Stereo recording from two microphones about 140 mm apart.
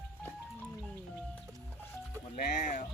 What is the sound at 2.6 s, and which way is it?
Speech, 65° left (ahead or behind).